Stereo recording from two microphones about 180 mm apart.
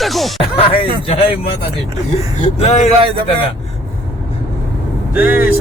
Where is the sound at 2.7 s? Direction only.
35° left (ahead or behind).